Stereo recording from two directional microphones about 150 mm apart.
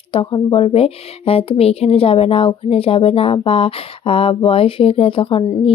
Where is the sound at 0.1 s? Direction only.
35° left (ahead or behind).